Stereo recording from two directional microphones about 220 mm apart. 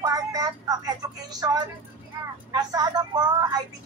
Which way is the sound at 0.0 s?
15° right (ahead or behind).